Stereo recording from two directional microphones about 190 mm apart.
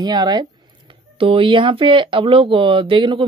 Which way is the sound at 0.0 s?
20° right (ahead or behind).